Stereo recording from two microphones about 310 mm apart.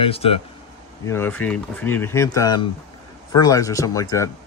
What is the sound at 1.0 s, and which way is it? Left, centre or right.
Speech, centre.